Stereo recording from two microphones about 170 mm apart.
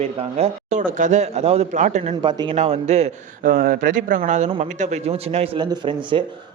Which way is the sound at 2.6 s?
40° right (ahead or behind).